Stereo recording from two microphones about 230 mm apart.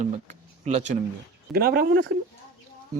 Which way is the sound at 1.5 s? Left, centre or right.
Right.